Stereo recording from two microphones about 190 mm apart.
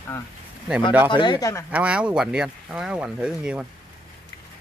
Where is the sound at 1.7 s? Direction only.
5° right (ahead or behind).